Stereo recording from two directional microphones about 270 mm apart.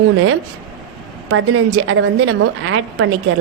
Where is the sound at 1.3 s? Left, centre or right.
Right.